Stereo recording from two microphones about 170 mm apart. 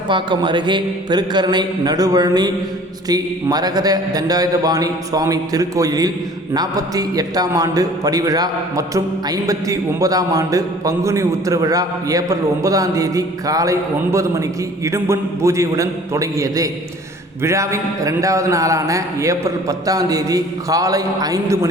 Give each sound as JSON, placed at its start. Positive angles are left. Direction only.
{"t": 0.1, "sound": "a man's voice", "side_deg": -30}